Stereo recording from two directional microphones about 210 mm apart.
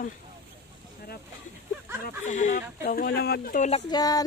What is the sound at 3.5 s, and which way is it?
Speech, 35° left (ahead or behind).